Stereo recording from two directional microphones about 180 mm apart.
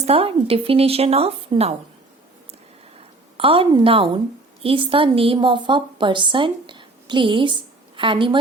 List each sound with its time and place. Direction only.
0.0 s a woman's voice: 35° right (ahead or behind)
3.3 s a woman's voice: 30° right (ahead or behind)